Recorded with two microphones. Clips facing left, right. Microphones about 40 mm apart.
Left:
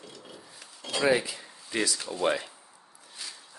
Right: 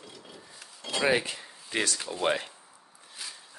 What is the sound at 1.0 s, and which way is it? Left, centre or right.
Speech, right.